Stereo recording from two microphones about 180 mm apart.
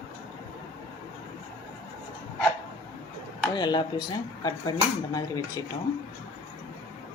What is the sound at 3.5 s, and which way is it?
Speech, 25° left (ahead or behind).